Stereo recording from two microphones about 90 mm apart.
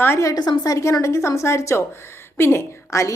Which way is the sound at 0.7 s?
35° left (ahead or behind).